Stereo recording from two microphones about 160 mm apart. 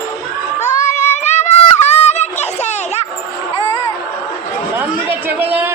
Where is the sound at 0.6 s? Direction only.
50° left (ahead or behind).